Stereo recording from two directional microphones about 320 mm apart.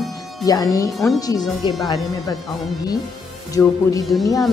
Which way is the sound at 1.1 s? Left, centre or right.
Centre.